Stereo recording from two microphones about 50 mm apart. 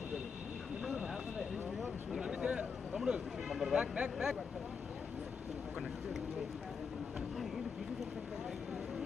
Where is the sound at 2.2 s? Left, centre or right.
Centre.